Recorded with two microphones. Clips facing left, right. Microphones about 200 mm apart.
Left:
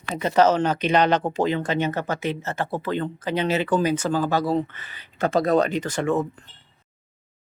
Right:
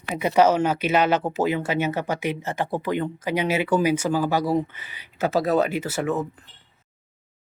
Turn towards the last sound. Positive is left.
turn(degrees=-5)  # may be behind; listen again after turning